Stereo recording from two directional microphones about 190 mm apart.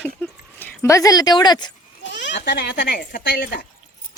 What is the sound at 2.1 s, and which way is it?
Speech, 65° left (ahead or behind).